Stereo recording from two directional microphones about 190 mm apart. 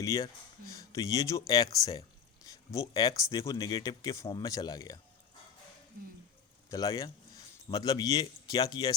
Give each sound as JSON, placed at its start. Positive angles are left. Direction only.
{"t": 0.0, "sound": "a man's voice", "side_deg": 15}
{"t": 6.7, "sound": "a man's voice", "side_deg": 20}